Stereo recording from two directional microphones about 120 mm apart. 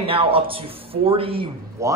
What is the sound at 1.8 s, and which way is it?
Speech, 25° right (ahead or behind).